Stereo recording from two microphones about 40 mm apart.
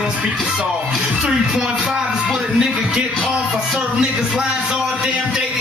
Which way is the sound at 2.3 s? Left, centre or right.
Centre.